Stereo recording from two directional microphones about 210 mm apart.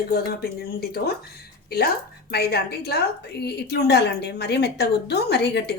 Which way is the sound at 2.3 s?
50° left (ahead or behind).